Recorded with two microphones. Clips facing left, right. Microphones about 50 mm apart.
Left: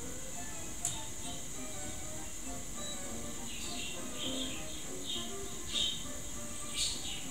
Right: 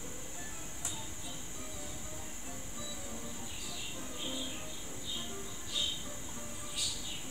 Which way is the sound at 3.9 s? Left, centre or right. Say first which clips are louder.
Even; centre.